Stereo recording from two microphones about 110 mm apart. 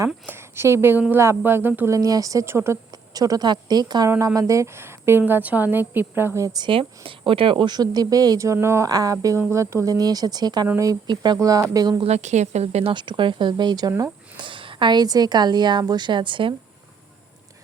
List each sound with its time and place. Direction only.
0.3 s a woman's voice: 20° right (ahead or behind)
3.1 s a woman's voice: 35° right (ahead or behind)
4.4 s a woman's voice: 30° right (ahead or behind)
6.7 s a woman's voice: 50° right (ahead or behind)
11.3 s a woman's voice: 30° right (ahead or behind)
12.0 s speech: 85° right
12.9 s a woman's voice: 45° right (ahead or behind)